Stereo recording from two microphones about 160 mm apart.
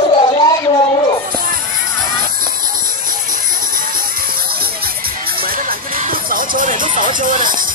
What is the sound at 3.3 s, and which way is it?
Music, 60° right (ahead or behind).